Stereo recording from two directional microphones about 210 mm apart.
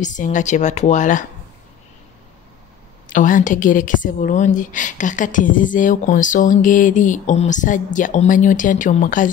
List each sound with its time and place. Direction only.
0.0 s a woman's voice: 35° left (ahead or behind)
3.1 s a woman's voice: 40° left (ahead or behind)